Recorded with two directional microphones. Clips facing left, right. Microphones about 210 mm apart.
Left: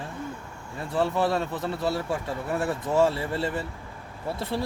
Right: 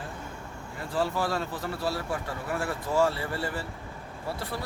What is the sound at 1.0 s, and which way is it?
A man's voice, 25° left (ahead or behind).